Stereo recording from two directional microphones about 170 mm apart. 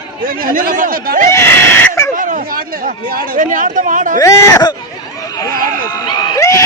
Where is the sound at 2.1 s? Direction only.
50° right (ahead or behind).